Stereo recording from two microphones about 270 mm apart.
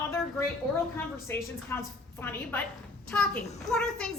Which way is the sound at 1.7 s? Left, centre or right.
Centre.